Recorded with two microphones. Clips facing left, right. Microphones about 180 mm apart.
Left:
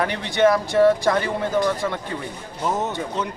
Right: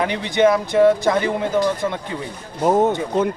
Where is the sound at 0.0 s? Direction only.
15° right (ahead or behind).